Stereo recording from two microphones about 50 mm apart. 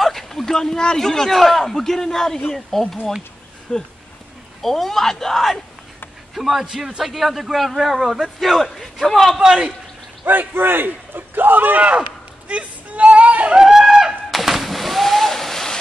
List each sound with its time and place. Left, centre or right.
0.0 s a man's voice: centre
4.6 s a man's voice: centre
6.3 s a man's voice: centre
9.4 s a man's voice: centre
10.2 s a sound: right
13.6 s a sound: centre